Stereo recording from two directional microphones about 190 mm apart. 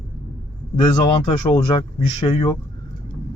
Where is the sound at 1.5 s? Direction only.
25° left (ahead or behind).